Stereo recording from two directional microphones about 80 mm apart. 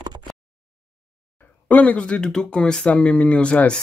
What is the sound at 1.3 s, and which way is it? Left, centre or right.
Speech, centre.